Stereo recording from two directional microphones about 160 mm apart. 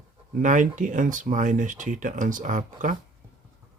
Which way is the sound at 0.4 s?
55° right (ahead or behind).